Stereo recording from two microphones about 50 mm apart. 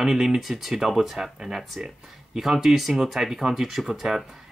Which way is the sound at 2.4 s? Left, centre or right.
Centre.